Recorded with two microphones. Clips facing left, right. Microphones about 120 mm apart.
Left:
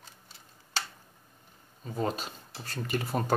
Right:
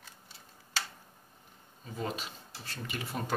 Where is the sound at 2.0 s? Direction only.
40° left (ahead or behind).